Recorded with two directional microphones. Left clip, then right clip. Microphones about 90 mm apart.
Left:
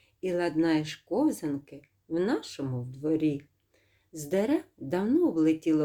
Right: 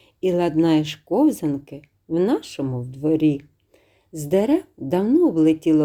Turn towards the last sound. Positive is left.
turn(degrees=-40)  # may be behind; listen again after turning